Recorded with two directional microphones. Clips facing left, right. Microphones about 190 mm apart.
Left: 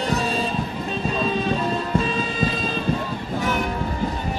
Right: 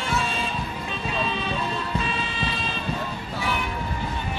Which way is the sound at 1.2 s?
40° left (ahead or behind).